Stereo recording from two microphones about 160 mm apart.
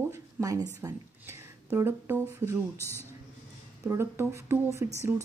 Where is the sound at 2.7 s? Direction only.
15° left (ahead or behind).